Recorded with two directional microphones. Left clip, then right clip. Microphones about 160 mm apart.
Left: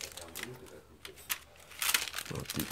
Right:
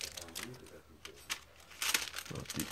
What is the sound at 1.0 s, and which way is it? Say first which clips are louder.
Crumpling: left 2 dB; 5° left (ahead or behind).